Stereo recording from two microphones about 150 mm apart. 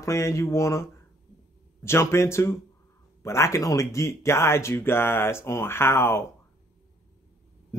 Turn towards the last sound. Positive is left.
turn(degrees=15)  # may be behind; listen again after turning